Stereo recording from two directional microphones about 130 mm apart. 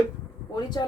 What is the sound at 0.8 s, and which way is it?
Speech, 35° left (ahead or behind).